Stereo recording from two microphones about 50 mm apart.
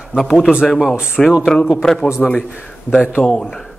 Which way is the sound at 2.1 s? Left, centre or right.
Left.